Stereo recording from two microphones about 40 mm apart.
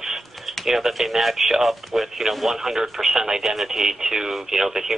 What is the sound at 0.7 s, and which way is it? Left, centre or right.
Speech, centre.